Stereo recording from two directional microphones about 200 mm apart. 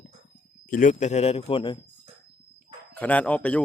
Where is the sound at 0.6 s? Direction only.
40° left (ahead or behind); by 1.8 s 25° left (ahead or behind).